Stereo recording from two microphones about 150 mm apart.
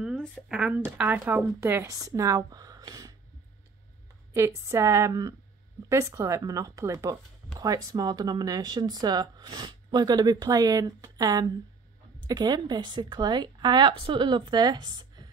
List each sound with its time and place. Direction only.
0.0 s speech: 5° left (ahead or behind); by 3.2 s 25° right (ahead or behind)
4.3 s a woman's voice: 20° right (ahead or behind)